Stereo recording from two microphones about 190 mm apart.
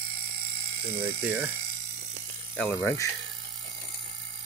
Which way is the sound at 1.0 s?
10° right (ahead or behind).